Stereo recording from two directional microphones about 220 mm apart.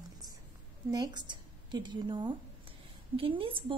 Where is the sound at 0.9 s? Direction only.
20° right (ahead or behind).